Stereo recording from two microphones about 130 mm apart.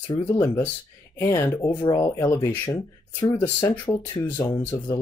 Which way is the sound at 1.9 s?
20° left (ahead or behind).